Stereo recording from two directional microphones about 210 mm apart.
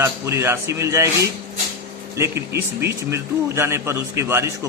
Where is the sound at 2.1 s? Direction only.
15° right (ahead or behind).